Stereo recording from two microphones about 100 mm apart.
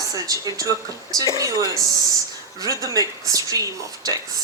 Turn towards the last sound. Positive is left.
turn(degrees=-35)  # may be behind; listen again after turning